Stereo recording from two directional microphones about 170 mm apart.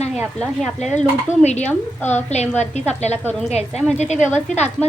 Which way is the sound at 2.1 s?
40° left (ahead or behind).